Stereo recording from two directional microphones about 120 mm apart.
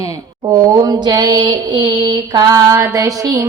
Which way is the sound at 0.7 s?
35° right (ahead or behind).